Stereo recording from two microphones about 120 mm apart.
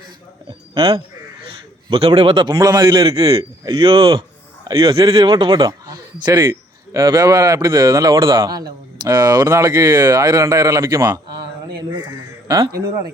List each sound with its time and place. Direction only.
0.7 s a man's voice: 50° right (ahead or behind)
3.6 s speech: 35° right (ahead or behind)
3.8 s speech: 50° right (ahead or behind)